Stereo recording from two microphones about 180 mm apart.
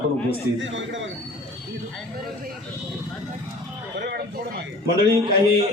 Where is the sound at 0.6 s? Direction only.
90° right.